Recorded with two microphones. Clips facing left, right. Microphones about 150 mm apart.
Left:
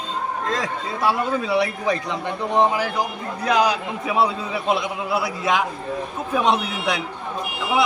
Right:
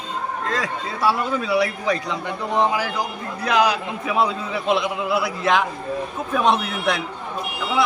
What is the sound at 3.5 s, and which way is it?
A man's voice, 20° left (ahead or behind).